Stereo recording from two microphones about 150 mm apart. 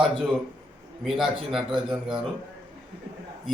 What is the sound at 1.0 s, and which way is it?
A man's voice, centre (ahead or behind).